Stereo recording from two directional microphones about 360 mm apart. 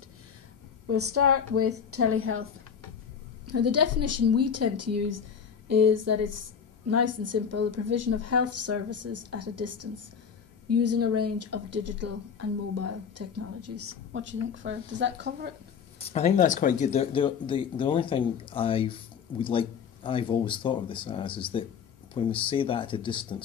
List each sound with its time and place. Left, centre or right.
0.8 s speech: right
3.4 s a woman's voice: right
16.0 s speech: centre